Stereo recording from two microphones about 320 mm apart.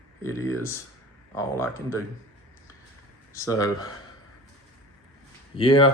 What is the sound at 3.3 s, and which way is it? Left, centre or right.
Speech, centre.